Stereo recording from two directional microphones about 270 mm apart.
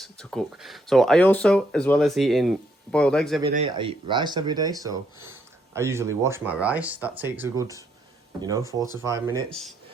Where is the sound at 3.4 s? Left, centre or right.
Right.